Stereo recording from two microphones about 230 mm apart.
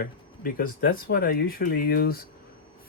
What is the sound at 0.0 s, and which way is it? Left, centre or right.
Speech, left.